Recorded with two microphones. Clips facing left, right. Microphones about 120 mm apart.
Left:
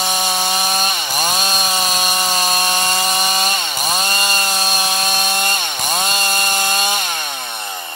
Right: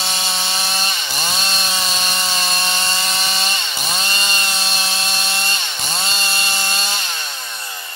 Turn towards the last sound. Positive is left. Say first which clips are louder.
# left 5 dB
turn(degrees=50)  # may be behind; listen again after turning